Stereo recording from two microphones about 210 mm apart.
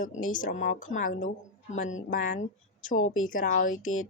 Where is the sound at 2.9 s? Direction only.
80° left.